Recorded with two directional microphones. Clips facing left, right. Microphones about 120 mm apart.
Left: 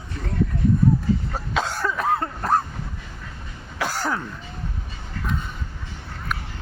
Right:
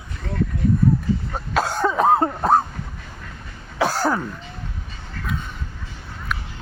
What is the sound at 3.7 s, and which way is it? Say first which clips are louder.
Throat clearing: right 5 dB; 15° right (ahead or behind).